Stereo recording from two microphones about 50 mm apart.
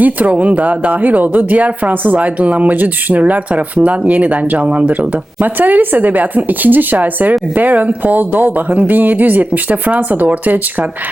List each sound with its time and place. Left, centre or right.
0.0 s speech: right